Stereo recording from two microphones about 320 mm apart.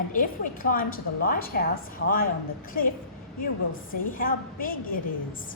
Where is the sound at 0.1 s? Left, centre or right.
Left.